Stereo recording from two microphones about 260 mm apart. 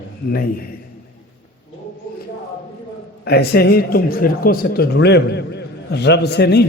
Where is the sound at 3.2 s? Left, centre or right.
Left.